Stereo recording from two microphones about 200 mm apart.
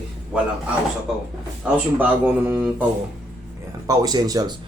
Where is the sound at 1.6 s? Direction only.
5° right (ahead or behind).